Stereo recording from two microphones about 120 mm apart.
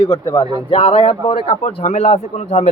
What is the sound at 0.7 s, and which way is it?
A man's voice, 45° left (ahead or behind).